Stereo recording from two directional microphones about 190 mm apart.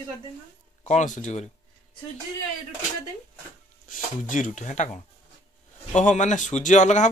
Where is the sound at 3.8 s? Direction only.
45° left (ahead or behind).